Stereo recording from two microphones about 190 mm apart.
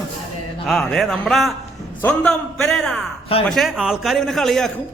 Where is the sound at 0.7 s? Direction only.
Centre (ahead or behind).